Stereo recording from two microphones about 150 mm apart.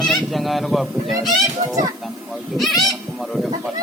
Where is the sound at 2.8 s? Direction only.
Centre (ahead or behind).